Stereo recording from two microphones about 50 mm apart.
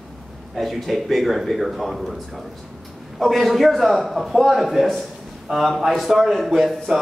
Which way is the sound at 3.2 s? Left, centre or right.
Centre.